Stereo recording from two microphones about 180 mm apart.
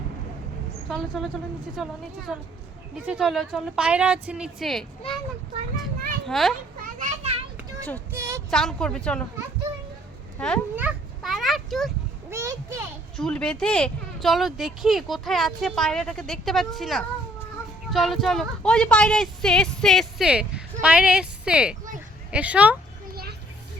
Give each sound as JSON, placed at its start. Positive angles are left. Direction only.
{"t": 0.9, "sound": "speech", "side_deg": 0}
{"t": 6.2, "sound": "a child's voice", "side_deg": 0}
{"t": 6.8, "sound": "children playing", "side_deg": -40}
{"t": 7.8, "sound": "speech", "side_deg": 10}
{"t": 8.1, "sound": "speech", "side_deg": -15}
{"t": 8.4, "sound": "speech", "side_deg": 5}
{"t": 10.3, "sound": "speech", "side_deg": 5}
{"t": 10.8, "sound": "children playing", "side_deg": -5}
{"t": 12.3, "sound": "a child's voice", "side_deg": -15}
{"t": 13.1, "sound": "speech", "side_deg": 5}